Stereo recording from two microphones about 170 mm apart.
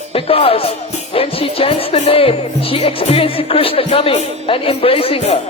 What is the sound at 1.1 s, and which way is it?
Speech, 35° left (ahead or behind).